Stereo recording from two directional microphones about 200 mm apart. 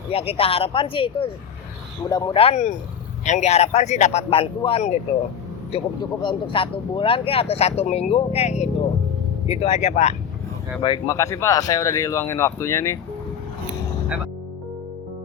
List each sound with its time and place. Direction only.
0.1 s speech: 30° left (ahead or behind)
10.8 s speech: 20° left (ahead or behind)